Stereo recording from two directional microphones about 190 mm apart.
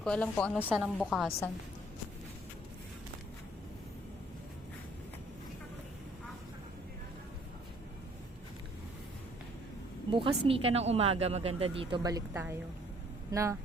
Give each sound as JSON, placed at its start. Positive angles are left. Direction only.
{"t": 0.0, "sound": "a woman's voice", "side_deg": 5}
{"t": 0.6, "sound": "a woman's voice", "side_deg": -10}
{"t": 10.1, "sound": "speech", "side_deg": -30}